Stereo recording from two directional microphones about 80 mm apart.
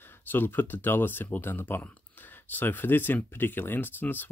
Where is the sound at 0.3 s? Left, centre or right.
Left.